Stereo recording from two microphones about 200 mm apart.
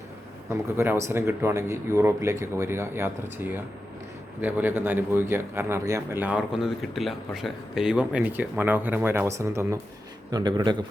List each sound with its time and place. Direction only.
0.5 s speech: 15° right (ahead or behind)
4.4 s speech: 10° right (ahead or behind)